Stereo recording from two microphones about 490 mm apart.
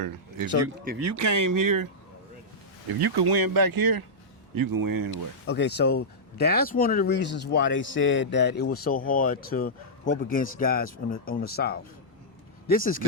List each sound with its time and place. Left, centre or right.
0.9 s speech: right
3.0 s speech: right
5.5 s speech: left